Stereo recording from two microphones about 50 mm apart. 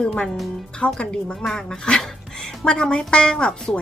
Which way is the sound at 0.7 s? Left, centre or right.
Left.